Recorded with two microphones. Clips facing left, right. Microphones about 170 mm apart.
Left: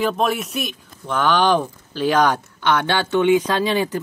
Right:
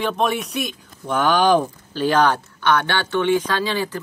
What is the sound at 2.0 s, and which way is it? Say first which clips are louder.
Speech: even; 10° left (ahead or behind).